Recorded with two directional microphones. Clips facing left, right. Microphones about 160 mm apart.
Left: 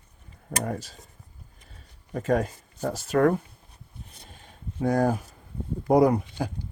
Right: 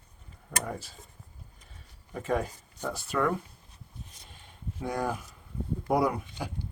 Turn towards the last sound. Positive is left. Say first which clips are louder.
# left 8 dB
turn(degrees=45)  # may be behind; listen again after turning